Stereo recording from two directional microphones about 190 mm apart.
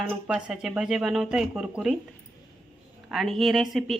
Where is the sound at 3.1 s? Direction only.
Centre (ahead or behind).